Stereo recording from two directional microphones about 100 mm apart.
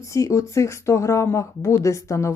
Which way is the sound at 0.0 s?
30° left (ahead or behind).